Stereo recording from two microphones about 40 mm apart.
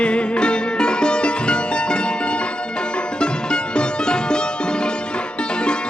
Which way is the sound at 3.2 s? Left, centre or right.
Left.